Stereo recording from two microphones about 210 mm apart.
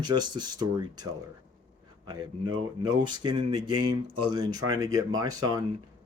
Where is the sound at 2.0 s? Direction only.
20° right (ahead or behind).